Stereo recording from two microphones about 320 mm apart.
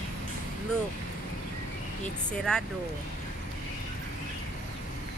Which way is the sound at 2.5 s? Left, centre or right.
Centre.